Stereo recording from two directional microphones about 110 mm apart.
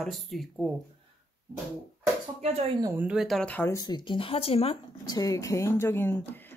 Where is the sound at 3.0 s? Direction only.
10° right (ahead or behind).